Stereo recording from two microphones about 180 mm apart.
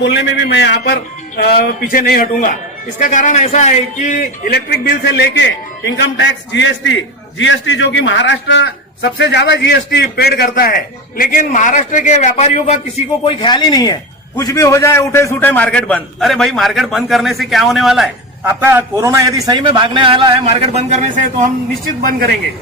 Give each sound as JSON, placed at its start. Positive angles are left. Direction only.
{"t": 0.0, "sound": "a man's voice", "side_deg": 85}
{"t": 1.4, "sound": "a man's voice", "side_deg": 60}
{"t": 13.2, "sound": "a man's voice", "side_deg": 25}
{"t": 22.0, "sound": "speech", "side_deg": -55}